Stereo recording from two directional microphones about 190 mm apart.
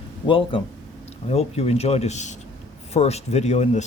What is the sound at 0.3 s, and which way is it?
Speech, 25° left (ahead or behind).